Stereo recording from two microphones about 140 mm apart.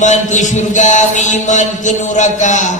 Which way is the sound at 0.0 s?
60° left (ahead or behind).